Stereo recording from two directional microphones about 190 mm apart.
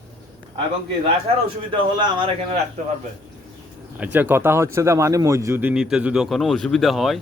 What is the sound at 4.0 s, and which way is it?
Speech, 10° right (ahead or behind).